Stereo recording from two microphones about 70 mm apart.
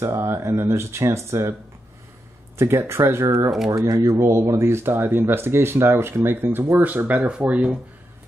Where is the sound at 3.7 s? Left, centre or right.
Right.